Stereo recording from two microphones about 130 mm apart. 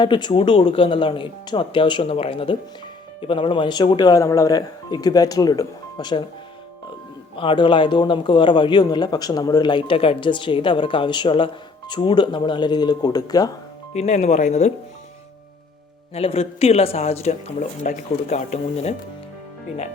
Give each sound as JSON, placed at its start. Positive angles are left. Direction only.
{"t": 0.0, "sound": "a man's voice", "side_deg": 35}
{"t": 7.3, "sound": "a man's voice", "side_deg": 40}
{"t": 13.9, "sound": "speech", "side_deg": 60}
{"t": 16.1, "sound": "speech", "side_deg": 50}